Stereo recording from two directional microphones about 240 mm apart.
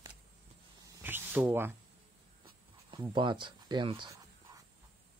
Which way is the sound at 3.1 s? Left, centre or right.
Centre.